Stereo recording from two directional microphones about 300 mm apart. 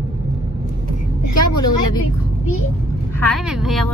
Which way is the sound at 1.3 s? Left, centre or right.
Left.